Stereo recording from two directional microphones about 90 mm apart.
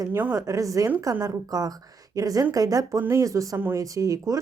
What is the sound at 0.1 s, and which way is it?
Speech, 20° right (ahead or behind).